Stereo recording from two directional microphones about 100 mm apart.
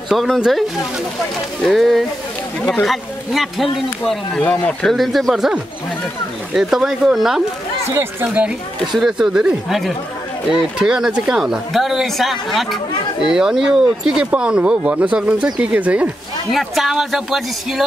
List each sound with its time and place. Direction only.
0.1 s speech: centre (ahead or behind)
4.4 s speech: 15° left (ahead or behind)
4.8 s speech: centre (ahead or behind)
7.9 s speech: 25° right (ahead or behind)
8.9 s speech: centre (ahead or behind)
16.5 s speech: centre (ahead or behind)